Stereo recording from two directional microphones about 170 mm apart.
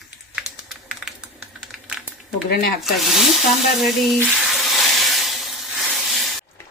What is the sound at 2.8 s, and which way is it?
Speech, centre (ahead or behind).